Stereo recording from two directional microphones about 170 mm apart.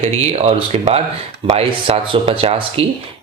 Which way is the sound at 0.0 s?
40° right (ahead or behind).